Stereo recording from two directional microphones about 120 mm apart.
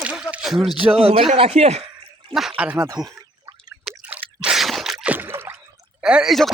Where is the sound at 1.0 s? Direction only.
55° right (ahead or behind).